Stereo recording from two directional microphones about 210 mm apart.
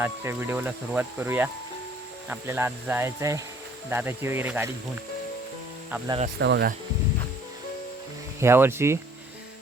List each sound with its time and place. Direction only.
0.0 s speech: 10° right (ahead or behind)
6.1 s speech: 30° right (ahead or behind)
6.4 s speech: 50° right (ahead or behind)
8.4 s speech: 10° right (ahead or behind)